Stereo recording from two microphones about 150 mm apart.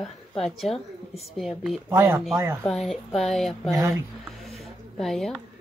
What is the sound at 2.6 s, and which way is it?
Speech, centre (ahead or behind).